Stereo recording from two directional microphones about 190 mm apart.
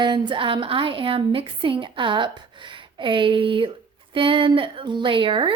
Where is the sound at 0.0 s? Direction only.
25° right (ahead or behind).